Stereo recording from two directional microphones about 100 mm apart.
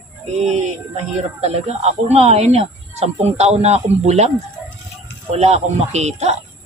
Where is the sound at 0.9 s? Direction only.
90° right.